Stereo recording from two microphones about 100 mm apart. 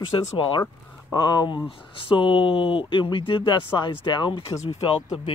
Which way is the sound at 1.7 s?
60° left (ahead or behind).